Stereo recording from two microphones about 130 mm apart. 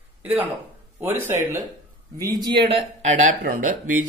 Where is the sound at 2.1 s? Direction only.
30° right (ahead or behind).